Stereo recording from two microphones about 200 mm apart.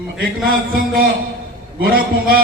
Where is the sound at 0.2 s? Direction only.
45° right (ahead or behind).